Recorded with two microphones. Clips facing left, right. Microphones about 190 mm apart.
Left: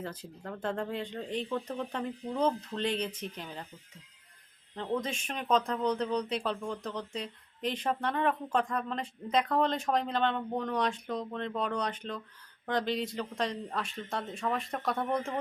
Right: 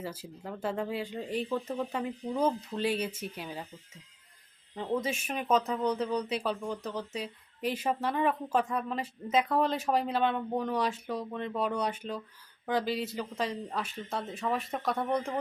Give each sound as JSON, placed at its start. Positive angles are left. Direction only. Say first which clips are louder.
{"t": 0.0, "sound": "speech", "louder": "right 1 dB", "side_deg": -5}
{"t": 4.7, "sound": "speech", "louder": "right 2 dB", "side_deg": -5}